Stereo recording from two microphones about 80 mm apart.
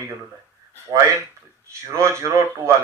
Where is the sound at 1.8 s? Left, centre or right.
Right.